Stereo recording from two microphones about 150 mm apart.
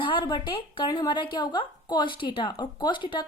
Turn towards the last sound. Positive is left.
turn(degrees=30)  # may be behind; listen again after turning